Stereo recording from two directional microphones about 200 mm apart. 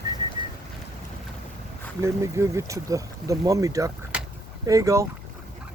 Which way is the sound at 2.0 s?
15° right (ahead or behind).